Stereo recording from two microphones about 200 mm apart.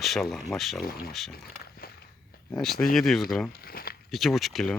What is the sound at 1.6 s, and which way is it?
Walk, 50° left (ahead or behind).